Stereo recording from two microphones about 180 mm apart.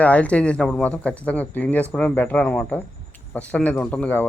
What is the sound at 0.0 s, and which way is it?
Speech, 10° left (ahead or behind).